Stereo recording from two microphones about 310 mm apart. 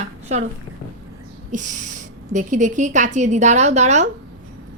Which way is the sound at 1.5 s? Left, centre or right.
Right.